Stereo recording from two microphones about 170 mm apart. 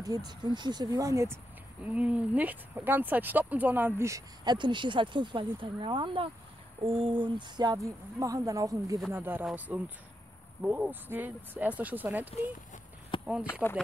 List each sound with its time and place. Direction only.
0.0 s speech: 20° right (ahead or behind)
13.1 s a sound: 30° left (ahead or behind)
13.5 s speech: 15° left (ahead or behind)